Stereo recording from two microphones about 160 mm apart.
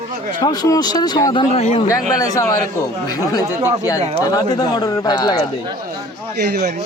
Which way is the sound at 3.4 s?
15° right (ahead or behind).